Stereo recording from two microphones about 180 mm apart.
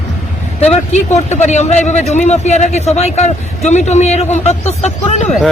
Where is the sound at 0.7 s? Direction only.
40° left (ahead or behind).